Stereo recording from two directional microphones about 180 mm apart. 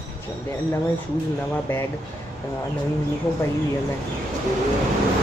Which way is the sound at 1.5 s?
10° left (ahead or behind).